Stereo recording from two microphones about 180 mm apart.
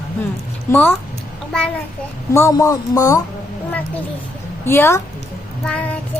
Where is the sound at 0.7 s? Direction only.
10° left (ahead or behind).